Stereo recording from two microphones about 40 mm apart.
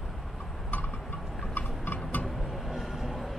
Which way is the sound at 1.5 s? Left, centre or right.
Left.